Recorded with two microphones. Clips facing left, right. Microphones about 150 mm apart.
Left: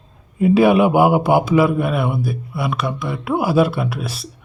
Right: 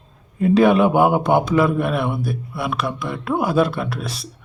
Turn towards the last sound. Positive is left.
turn(degrees=5)  # may be behind; listen again after turning